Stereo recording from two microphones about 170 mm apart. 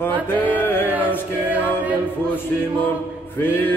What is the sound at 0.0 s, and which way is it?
Music, 10° left (ahead or behind).